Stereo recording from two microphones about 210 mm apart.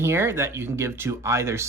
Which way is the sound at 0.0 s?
10° right (ahead or behind).